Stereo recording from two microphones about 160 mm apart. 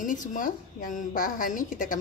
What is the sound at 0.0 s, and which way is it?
A woman's voice, 55° left (ahead or behind).